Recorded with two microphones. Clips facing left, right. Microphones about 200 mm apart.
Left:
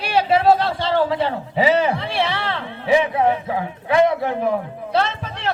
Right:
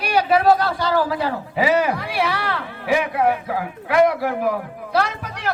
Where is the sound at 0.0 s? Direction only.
25° left (ahead or behind).